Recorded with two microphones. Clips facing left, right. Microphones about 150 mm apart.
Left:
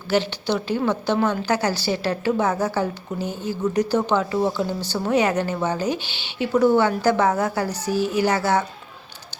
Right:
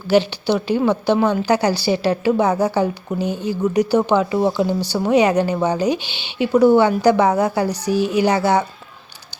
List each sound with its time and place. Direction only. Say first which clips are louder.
0.1 s a woman's voice: right 5 dB; 10° right (ahead or behind)